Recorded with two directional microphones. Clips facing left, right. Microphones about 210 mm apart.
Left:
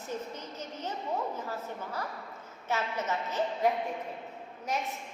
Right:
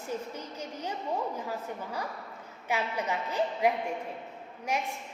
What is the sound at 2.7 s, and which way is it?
A woman's voice, 15° right (ahead or behind).